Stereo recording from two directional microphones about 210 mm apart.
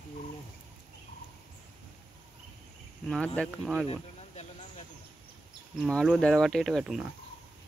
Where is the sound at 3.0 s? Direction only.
5° left (ahead or behind).